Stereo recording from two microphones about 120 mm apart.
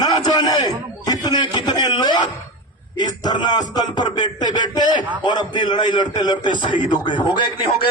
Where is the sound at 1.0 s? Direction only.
35° left (ahead or behind).